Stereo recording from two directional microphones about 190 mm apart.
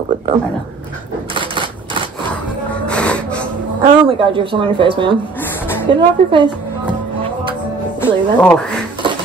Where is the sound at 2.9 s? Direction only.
5° left (ahead or behind).